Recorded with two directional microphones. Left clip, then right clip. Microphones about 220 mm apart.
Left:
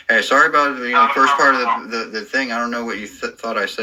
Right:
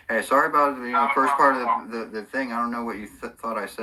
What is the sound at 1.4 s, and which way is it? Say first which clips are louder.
Speech: left 5 dB; centre (ahead or behind).